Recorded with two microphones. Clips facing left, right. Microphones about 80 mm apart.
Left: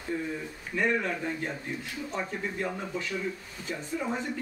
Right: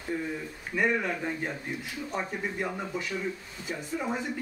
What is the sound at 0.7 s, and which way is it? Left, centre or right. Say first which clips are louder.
Speech: right 1 dB; centre.